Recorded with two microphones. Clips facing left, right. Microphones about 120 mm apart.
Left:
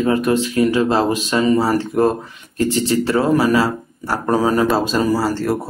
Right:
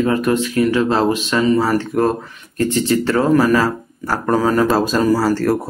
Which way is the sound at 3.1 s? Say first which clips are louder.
Right 1 dB; 10° left (ahead or behind).